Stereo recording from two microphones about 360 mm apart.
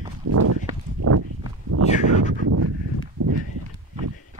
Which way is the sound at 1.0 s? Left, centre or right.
Right.